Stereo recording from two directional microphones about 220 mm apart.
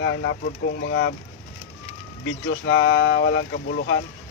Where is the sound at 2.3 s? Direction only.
60° left (ahead or behind).